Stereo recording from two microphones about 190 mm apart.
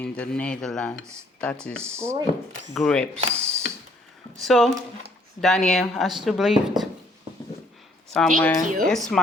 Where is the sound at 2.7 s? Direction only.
5° left (ahead or behind).